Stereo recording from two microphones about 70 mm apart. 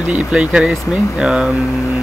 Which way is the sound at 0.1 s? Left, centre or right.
Centre.